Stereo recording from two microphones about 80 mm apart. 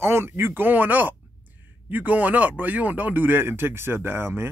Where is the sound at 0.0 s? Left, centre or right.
Right.